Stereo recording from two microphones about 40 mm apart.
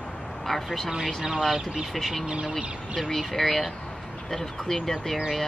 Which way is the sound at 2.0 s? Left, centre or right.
Centre.